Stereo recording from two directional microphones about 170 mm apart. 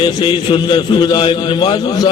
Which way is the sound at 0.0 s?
30° left (ahead or behind).